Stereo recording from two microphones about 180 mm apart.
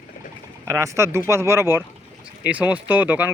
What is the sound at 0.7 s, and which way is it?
Speech, 15° right (ahead or behind).